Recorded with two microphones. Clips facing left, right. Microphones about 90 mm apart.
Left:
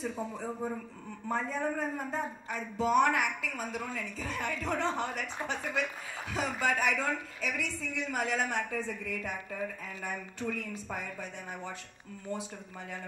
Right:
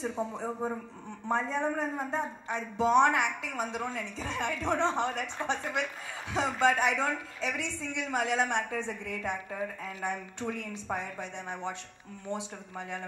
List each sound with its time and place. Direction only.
0.0 s a woman's voice: 25° right (ahead or behind)